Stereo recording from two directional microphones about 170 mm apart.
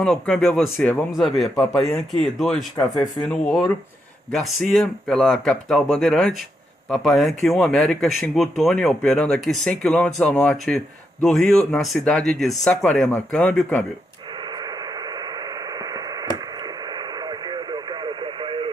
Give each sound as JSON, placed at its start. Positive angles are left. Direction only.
{"t": 0.0, "sound": "speech", "side_deg": 0}
{"t": 14.6, "sound": "radio", "side_deg": -25}